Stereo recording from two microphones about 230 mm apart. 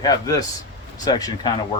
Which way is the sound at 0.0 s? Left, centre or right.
Centre.